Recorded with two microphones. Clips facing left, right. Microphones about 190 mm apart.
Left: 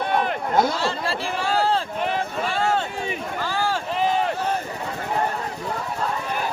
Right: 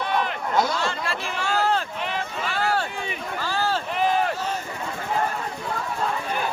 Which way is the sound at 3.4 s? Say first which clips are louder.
Even; 15° left (ahead or behind).